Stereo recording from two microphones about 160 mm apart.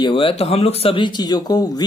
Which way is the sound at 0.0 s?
35° left (ahead or behind).